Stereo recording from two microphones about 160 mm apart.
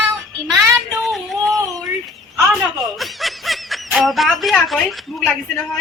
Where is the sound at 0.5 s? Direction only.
20° right (ahead or behind).